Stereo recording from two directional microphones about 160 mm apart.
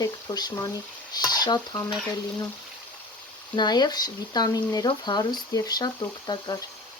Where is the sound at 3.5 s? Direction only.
25° left (ahead or behind).